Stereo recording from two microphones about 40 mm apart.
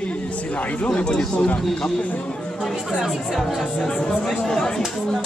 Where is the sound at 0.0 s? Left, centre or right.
Left.